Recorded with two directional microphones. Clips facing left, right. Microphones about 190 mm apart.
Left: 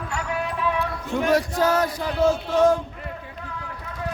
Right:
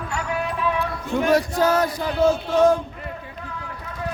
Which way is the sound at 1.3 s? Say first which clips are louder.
Right 1 dB; 25° right (ahead or behind).